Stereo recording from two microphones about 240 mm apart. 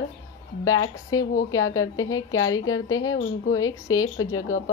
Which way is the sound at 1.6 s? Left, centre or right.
Left.